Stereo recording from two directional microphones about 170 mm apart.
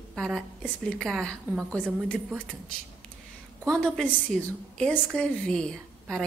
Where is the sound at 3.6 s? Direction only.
Centre (ahead or behind).